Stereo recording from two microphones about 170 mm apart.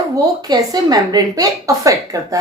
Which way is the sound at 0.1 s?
20° right (ahead or behind).